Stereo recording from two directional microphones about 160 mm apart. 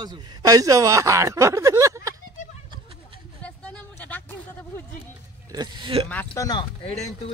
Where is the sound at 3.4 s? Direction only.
10° left (ahead or behind).